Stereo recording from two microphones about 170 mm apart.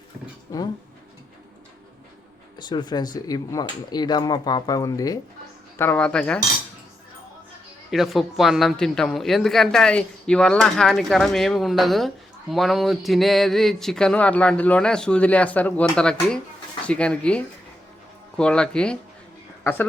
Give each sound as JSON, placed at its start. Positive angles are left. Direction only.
{"t": 0.5, "sound": "speech", "side_deg": 20}
{"t": 2.6, "sound": "speech", "side_deg": 25}
{"t": 7.9, "sound": "speech", "side_deg": 0}